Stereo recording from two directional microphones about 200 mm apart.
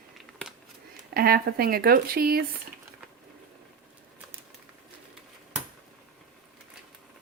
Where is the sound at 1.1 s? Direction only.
50° right (ahead or behind).